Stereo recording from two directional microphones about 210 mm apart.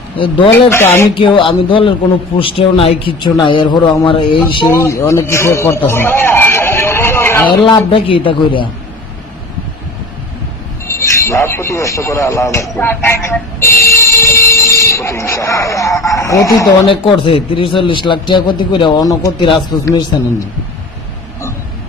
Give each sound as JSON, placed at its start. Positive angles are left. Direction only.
{"t": 0.7, "sound": "speech", "side_deg": 10}
{"t": 1.1, "sound": "a man's voice", "side_deg": 25}
{"t": 4.6, "sound": "a man's voice", "side_deg": 15}
{"t": 7.6, "sound": "a man's voice", "side_deg": 25}
{"t": 10.9, "sound": "a man's voice", "side_deg": 15}